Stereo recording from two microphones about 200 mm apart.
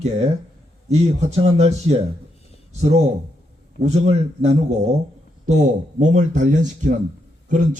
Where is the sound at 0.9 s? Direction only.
35° right (ahead or behind).